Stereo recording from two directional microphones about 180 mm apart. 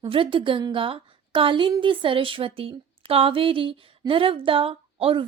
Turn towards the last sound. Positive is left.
turn(degrees=-30)  # may be behind; listen again after turning